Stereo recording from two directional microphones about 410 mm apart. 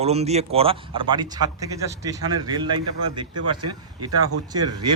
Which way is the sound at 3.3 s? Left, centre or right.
Right.